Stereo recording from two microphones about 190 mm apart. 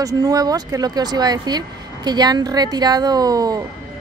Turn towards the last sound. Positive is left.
turn(degrees=-20)  # may be behind; listen again after turning